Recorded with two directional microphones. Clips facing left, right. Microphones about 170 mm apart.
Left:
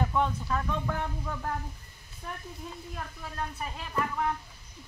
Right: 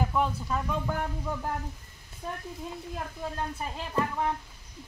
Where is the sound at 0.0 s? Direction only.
5° right (ahead or behind).